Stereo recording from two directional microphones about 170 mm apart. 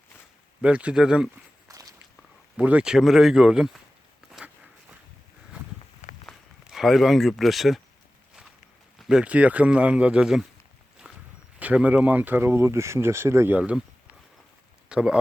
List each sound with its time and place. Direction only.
0.6 s speech: 5° right (ahead or behind)
1.6 s walk: 20° right (ahead or behind)
2.6 s speech: 5° right (ahead or behind)
4.3 s a sound: 5° right (ahead or behind)
6.2 s a sound: centre (ahead or behind)
9.0 s speech: 5° right (ahead or behind)
11.6 s speech: 10° right (ahead or behind)
14.8 s speech: 5° right (ahead or behind)